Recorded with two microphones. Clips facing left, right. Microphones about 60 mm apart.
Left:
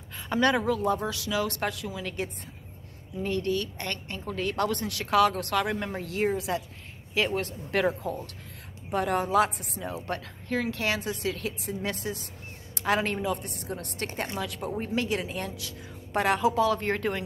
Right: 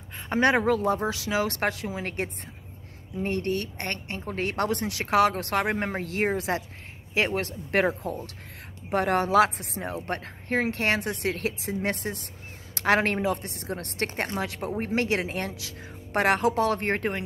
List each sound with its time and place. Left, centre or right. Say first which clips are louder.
0.3 s speech: right 3 dB; right
8.9 s speech: right 3 dB; right
9.9 s speech: right 2 dB; right
12.7 s speech: right 4 dB; right